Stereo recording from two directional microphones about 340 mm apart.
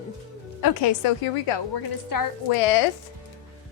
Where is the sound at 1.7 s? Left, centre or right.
Left.